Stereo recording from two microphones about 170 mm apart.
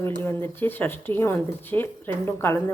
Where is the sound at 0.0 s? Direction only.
10° left (ahead or behind).